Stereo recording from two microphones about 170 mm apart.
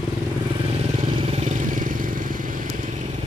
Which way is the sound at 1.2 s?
40° right (ahead or behind).